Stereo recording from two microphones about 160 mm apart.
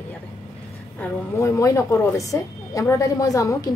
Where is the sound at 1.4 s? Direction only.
20° left (ahead or behind).